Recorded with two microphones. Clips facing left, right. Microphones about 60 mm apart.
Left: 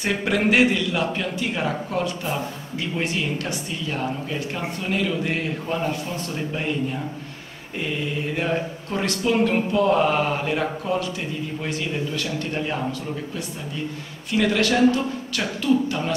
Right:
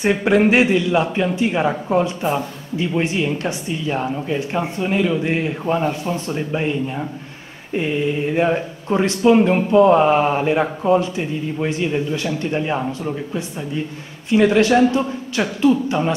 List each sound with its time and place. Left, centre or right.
0.0 s speech: right
7.7 s speech: right